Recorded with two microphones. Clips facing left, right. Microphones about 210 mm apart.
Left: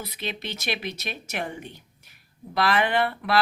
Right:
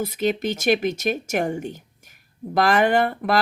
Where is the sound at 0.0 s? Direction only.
45° right (ahead or behind).